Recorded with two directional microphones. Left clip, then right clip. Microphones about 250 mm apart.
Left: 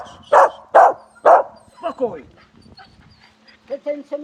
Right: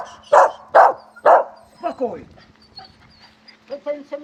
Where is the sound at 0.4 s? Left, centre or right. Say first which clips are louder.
Left 1 dB; left.